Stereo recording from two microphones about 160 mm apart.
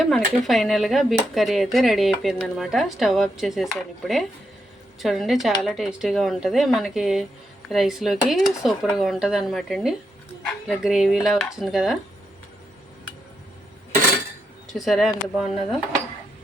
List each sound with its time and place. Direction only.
0.0 s speech: centre (ahead or behind)
14.7 s speech: centre (ahead or behind)